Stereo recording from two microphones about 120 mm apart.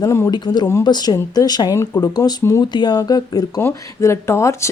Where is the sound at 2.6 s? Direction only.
40° left (ahead or behind).